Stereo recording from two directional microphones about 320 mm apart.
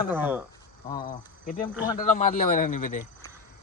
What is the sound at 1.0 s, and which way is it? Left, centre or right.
A man's voice, left.